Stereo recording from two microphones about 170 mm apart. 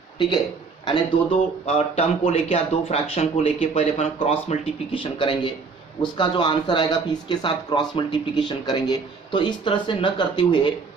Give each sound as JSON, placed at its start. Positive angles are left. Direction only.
{"t": 0.9, "sound": "speech", "side_deg": 35}